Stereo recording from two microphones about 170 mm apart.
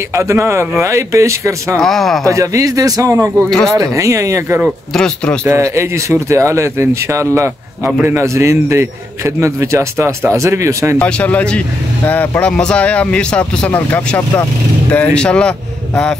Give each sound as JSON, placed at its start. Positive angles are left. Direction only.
{"t": 0.1, "sound": "speech", "side_deg": -15}
{"t": 1.8, "sound": "speech", "side_deg": 0}
{"t": 2.2, "sound": "a man's voice", "side_deg": -20}
{"t": 3.4, "sound": "speech", "side_deg": 0}
{"t": 3.7, "sound": "speech", "side_deg": -20}
{"t": 4.6, "sound": "speech", "side_deg": 5}
{"t": 5.4, "sound": "speech", "side_deg": -15}
{"t": 11.0, "sound": "speech", "side_deg": 5}